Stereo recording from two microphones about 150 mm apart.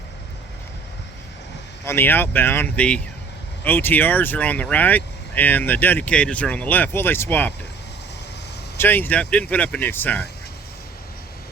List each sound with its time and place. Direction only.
1.8 s speech: 15° left (ahead or behind)
8.8 s speech: 15° left (ahead or behind)